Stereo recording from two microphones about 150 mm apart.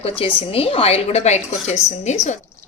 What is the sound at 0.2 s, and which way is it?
A woman's voice, 40° left (ahead or behind).